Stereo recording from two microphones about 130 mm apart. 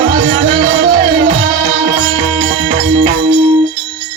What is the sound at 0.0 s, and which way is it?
Music, 50° right (ahead or behind).